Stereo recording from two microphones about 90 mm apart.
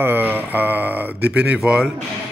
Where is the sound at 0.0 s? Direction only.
20° right (ahead or behind).